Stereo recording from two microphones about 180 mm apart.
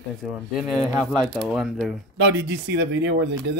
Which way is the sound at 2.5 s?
75° right (ahead or behind).